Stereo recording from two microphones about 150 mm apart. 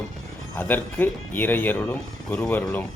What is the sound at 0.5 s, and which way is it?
Speech, 10° left (ahead or behind).